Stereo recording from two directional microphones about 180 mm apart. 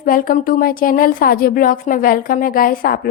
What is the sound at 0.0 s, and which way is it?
Speech, 50° left (ahead or behind).